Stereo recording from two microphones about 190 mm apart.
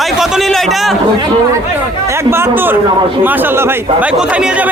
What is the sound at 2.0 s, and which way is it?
Speech, 15° right (ahead or behind).